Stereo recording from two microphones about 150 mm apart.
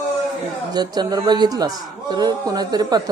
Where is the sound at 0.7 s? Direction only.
25° right (ahead or behind).